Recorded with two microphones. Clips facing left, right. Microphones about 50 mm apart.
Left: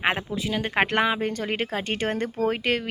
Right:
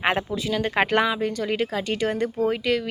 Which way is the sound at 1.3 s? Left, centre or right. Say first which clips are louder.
Right 2 dB; left.